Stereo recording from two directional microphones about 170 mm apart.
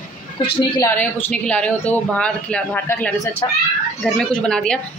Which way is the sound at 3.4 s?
20° left (ahead or behind).